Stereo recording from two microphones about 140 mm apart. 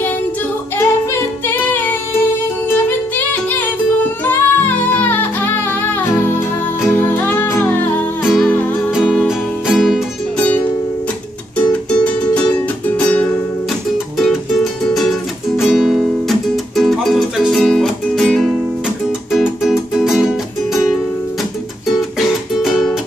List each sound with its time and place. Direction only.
0.7 s music: 15° left (ahead or behind)
8.2 s music: centre (ahead or behind)
11.7 s music: 10° left (ahead or behind)
13.9 s music: centre (ahead or behind)
22.2 s music: centre (ahead or behind)